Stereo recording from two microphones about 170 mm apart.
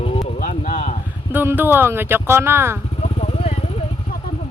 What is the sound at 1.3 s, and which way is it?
Speech, 10° right (ahead or behind).